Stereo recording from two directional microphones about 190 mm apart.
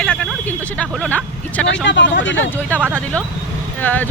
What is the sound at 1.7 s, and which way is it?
Speech, 70° left (ahead or behind).